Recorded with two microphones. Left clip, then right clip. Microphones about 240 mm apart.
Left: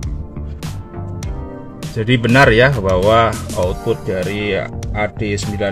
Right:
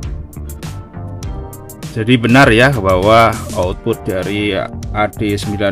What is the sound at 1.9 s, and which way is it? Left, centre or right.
Speech, right.